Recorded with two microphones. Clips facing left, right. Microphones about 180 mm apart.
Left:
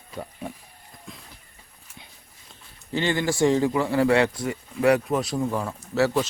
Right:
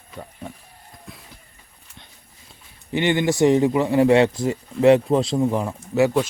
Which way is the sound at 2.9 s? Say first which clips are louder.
Right 4 dB; 20° right (ahead or behind).